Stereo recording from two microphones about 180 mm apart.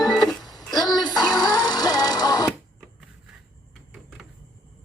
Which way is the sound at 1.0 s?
25° left (ahead or behind).